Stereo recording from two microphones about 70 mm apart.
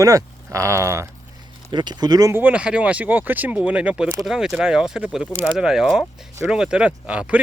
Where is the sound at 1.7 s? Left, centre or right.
Right.